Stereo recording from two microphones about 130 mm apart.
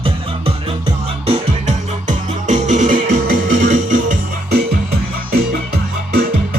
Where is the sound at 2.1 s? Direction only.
70° right (ahead or behind).